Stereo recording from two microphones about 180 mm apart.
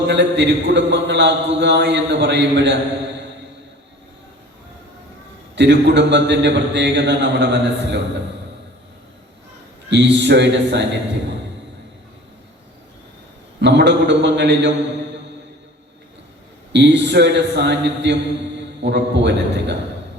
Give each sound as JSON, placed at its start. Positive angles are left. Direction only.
{"t": 0.1, "sound": "a man's voice", "side_deg": -75}
{"t": 5.5, "sound": "a man's voice", "side_deg": -75}
{"t": 9.9, "sound": "a man's voice", "side_deg": -75}
{"t": 13.6, "sound": "a man's voice", "side_deg": -75}
{"t": 16.7, "sound": "a man's voice", "side_deg": -75}